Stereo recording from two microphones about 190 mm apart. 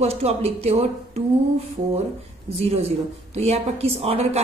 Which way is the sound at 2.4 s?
30° right (ahead or behind).